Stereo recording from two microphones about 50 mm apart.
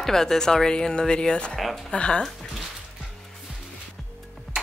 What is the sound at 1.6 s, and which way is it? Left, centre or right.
Speech, centre.